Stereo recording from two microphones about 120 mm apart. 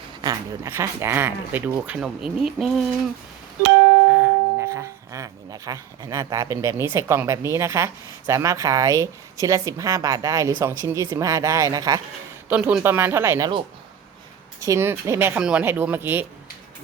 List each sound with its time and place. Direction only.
0.2 s speech: 30° right (ahead or behind)
0.7 s a woman's voice: 20° right (ahead or behind)
2.0 s speech: 5° right (ahead or behind)
4.2 s a woman's voice: 20° right (ahead or behind)
12.5 s a woman's voice: 10° right (ahead or behind)
14.6 s a woman's voice: 20° right (ahead or behind)
15.4 s speech: 10° right (ahead or behind)